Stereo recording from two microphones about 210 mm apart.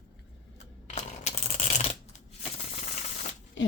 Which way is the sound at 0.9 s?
35° left (ahead or behind).